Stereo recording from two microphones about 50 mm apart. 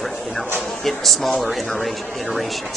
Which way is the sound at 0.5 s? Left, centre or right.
Centre.